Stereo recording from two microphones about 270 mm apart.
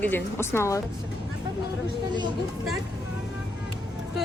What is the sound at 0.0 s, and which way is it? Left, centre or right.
Speech, centre.